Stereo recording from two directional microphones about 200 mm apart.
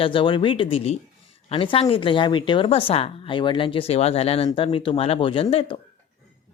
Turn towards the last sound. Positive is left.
turn(degrees=25)  # may be behind; listen again after turning